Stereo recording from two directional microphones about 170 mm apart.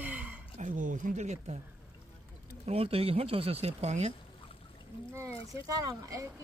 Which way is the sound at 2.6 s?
35° right (ahead or behind).